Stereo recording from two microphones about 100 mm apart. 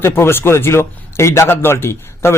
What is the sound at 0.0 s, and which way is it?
A man's voice, 25° left (ahead or behind).